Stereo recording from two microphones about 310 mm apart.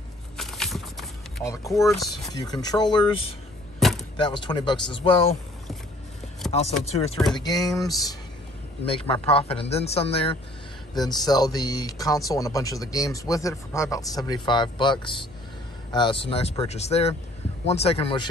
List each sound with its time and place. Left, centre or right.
0.4 s vehicle: centre
2.3 s speech: centre
3.8 s door: centre
4.2 s speech: centre
6.8 s speech: centre